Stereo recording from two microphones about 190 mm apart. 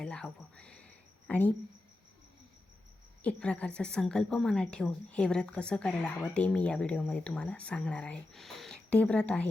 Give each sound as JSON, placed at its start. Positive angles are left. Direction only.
{"t": 0.0, "sound": "a sound", "side_deg": 5}
{"t": 1.3, "sound": "a woman's voice", "side_deg": 5}
{"t": 3.2, "sound": "a woman's voice", "side_deg": 5}